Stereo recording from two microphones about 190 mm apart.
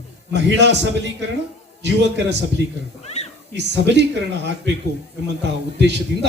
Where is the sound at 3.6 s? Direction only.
65° right (ahead or behind).